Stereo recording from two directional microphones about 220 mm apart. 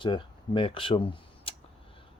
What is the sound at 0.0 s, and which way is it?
Speech, 20° left (ahead or behind).